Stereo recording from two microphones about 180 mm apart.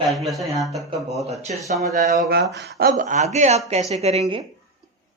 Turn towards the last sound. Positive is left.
turn(degrees=-35)  # may be behind; listen again after turning